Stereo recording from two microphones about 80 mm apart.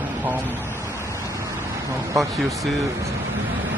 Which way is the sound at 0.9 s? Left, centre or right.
Left.